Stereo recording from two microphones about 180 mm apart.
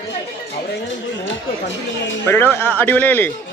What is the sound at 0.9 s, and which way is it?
Speech, 90° left.